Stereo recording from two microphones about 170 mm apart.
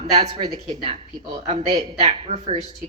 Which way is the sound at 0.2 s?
35° right (ahead or behind).